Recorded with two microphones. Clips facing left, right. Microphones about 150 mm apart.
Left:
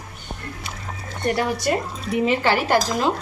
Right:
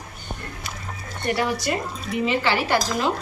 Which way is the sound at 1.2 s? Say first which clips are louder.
Left 2 dB; 45° left (ahead or behind).